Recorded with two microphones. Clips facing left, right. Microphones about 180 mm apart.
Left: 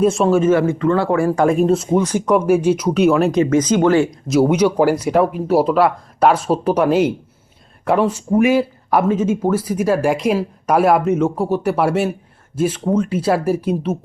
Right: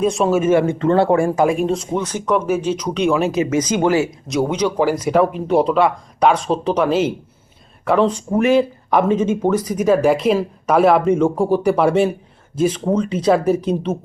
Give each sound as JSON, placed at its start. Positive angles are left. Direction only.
{"t": 0.0, "sound": "speech", "side_deg": 0}
{"t": 1.4, "sound": "speech", "side_deg": 0}
{"t": 3.4, "sound": "speech", "side_deg": -10}